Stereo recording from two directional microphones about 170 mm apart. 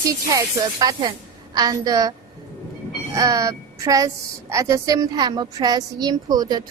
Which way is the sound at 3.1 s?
20° right (ahead or behind).